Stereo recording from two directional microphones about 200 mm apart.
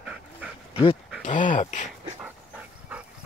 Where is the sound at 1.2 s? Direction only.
40° left (ahead or behind).